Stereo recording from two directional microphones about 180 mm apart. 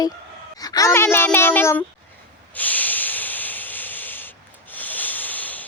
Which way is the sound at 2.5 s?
10° left (ahead or behind).